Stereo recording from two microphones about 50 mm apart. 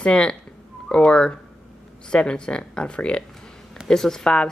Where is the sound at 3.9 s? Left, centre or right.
Centre.